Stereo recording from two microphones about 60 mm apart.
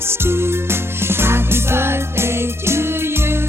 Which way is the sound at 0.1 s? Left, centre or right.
Right.